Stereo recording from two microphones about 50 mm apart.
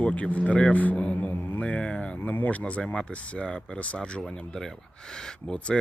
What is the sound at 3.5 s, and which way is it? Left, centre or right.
Speech, centre.